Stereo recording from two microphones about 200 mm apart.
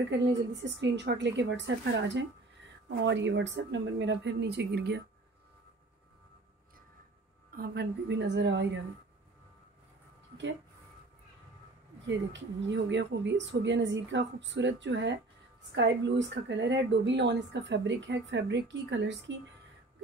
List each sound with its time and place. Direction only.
0.1 s speech: 65° right (ahead or behind)
7.5 s speech: 50° right (ahead or behind)
12.1 s speech: 65° right (ahead or behind)